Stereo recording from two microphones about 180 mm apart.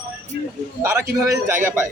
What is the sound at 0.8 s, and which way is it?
A man's voice, 15° right (ahead or behind).